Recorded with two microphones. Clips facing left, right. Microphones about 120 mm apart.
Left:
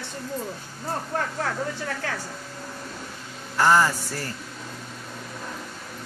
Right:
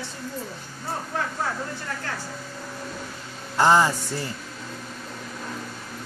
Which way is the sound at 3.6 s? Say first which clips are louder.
Right 1 dB; 20° right (ahead or behind).